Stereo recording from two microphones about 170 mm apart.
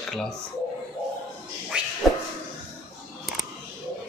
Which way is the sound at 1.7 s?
5° right (ahead or behind).